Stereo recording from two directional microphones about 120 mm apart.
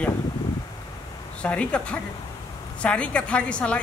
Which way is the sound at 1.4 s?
10° left (ahead or behind).